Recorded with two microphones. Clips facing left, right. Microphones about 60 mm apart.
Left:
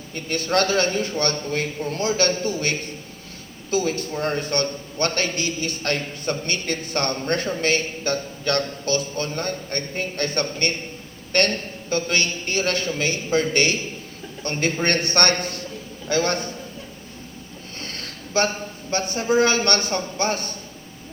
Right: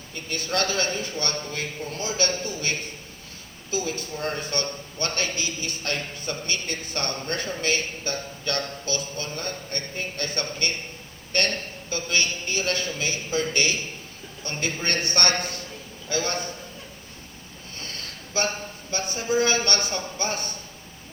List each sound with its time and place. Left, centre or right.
0.1 s a man's voice: left
17.7 s a man's voice: left